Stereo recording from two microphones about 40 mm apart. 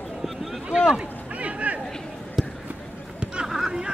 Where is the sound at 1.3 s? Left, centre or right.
Right.